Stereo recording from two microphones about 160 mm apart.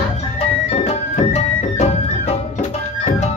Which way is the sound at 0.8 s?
40° left (ahead or behind).